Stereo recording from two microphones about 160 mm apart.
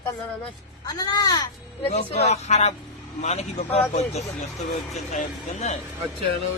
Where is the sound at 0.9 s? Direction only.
25° left (ahead or behind).